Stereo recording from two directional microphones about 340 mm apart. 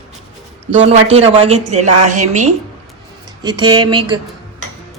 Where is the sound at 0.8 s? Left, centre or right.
Centre.